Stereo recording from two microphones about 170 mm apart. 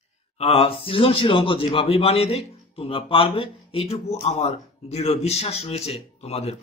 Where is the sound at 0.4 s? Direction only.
35° left (ahead or behind).